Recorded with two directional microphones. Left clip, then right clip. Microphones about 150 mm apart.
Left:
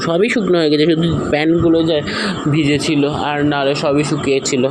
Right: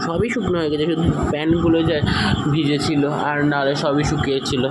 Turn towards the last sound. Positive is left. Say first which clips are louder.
# left 4 dB
turn(degrees=20)  # may be behind; listen again after turning